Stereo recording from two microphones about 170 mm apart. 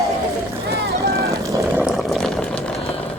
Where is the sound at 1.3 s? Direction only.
20° right (ahead or behind).